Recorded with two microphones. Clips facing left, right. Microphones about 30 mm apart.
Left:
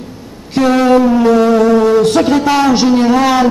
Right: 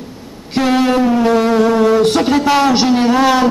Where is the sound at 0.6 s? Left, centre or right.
Centre.